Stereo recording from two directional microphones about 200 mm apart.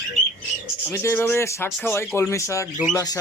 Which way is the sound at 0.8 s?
15° left (ahead or behind).